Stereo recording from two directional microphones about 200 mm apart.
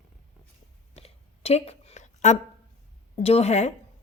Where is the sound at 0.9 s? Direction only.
30° left (ahead or behind).